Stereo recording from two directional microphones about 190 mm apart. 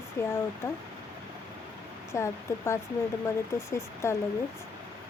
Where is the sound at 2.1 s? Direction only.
15° left (ahead or behind).